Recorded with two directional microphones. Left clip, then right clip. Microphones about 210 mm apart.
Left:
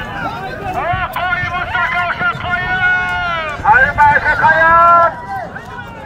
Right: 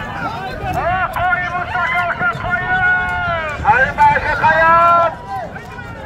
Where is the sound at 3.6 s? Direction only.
10° right (ahead or behind).